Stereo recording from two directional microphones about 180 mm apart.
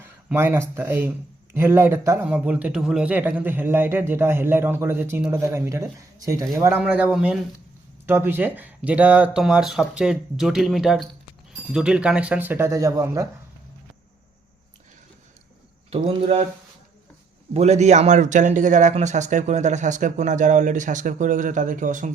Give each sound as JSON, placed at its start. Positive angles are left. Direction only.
{"t": 0.0, "sound": "a man's voice", "side_deg": -10}
{"t": 15.9, "sound": "speech", "side_deg": -30}
{"t": 17.5, "sound": "a man's voice", "side_deg": -40}